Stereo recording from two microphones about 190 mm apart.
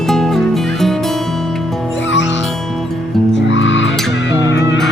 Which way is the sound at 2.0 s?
75° left (ahead or behind).